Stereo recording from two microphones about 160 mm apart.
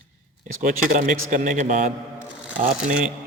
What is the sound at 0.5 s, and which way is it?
Speech, 55° right (ahead or behind).